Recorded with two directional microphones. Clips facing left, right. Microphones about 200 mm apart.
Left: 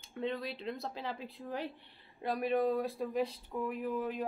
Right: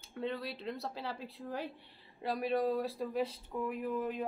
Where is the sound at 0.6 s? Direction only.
15° left (ahead or behind).